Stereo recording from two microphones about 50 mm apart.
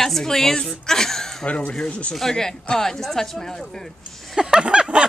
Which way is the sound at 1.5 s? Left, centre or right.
Left.